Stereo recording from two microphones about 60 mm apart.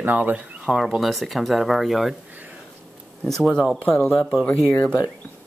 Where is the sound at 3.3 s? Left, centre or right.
Centre.